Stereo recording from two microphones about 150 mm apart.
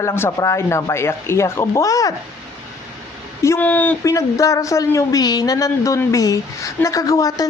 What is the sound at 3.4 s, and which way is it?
Speech, 15° left (ahead or behind).